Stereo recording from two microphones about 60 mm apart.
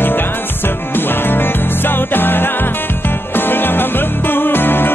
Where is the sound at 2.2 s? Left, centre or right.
Left.